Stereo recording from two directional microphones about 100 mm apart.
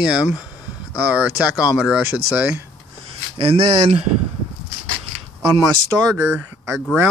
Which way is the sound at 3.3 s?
65° right (ahead or behind).